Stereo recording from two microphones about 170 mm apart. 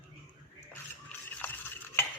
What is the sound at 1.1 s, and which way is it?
Toothbrush, 10° left (ahead or behind).